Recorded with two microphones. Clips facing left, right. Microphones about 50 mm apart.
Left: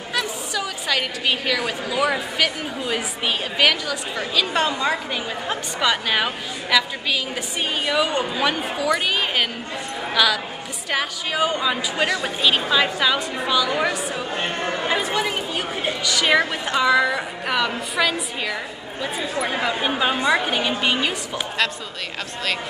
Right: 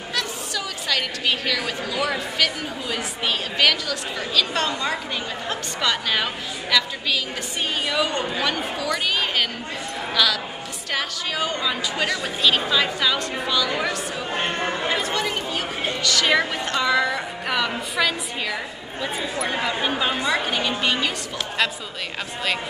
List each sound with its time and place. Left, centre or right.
0.1 s a woman's voice: centre
14.3 s chatter: right
14.9 s a woman's voice: centre